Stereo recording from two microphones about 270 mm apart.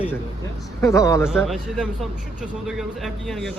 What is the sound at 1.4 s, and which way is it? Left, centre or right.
A man's voice, centre.